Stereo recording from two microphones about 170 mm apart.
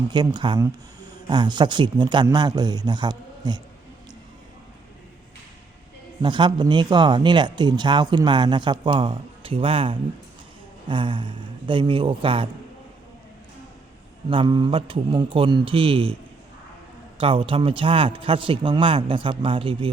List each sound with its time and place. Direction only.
0.1 s speech: 25° right (ahead or behind)
6.2 s speech: 25° right (ahead or behind)
14.3 s a man's voice: 30° right (ahead or behind)
17.2 s a man's voice: 30° right (ahead or behind)